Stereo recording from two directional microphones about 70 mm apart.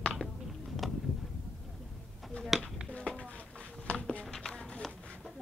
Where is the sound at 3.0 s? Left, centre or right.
Centre.